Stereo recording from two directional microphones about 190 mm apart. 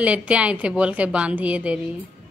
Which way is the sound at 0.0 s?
5° right (ahead or behind).